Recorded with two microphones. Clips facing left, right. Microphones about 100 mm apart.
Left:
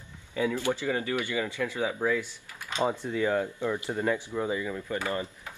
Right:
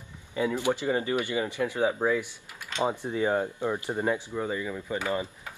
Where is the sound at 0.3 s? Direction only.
15° right (ahead or behind).